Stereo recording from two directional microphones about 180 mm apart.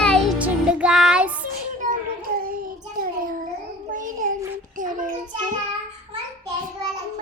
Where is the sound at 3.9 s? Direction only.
45° right (ahead or behind).